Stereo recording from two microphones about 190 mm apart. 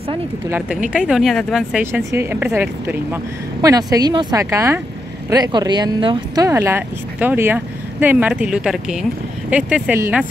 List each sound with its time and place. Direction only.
0.5 s speech: 5° right (ahead or behind)